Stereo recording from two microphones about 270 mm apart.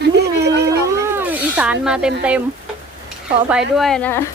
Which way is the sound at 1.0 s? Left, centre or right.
Centre.